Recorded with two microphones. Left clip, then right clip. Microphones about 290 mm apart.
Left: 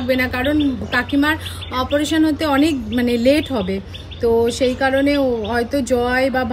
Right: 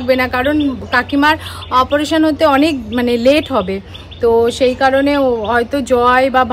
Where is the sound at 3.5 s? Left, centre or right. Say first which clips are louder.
Right 6 dB; right.